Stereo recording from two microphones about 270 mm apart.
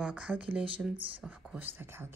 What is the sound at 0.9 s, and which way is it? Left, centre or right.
Speech, centre.